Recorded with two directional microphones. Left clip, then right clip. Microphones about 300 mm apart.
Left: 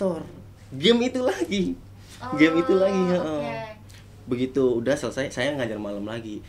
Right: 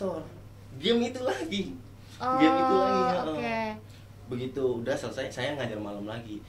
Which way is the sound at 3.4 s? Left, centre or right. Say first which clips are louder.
Even; right.